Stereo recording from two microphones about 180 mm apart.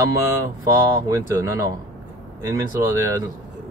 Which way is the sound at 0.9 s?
15° right (ahead or behind).